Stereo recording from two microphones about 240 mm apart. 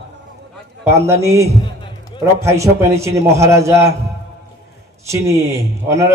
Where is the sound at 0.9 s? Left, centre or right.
Centre.